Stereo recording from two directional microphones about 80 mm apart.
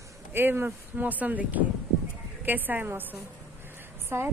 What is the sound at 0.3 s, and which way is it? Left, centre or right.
Speech, right.